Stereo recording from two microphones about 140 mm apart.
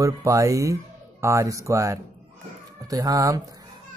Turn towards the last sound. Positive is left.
turn(degrees=-25)  # may be behind; listen again after turning